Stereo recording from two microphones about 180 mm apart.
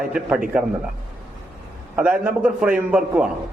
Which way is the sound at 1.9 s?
10° right (ahead or behind).